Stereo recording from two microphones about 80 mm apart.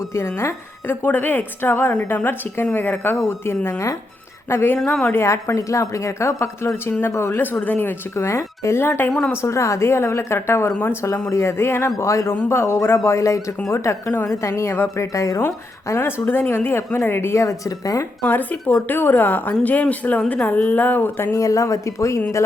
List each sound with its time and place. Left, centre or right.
0.1 s a woman's voice: left
7.3 s a woman's voice: left
15.4 s a woman's voice: left
17.7 s a woman's voice: left
18.3 s a woman's voice: left
21.3 s a woman's voice: left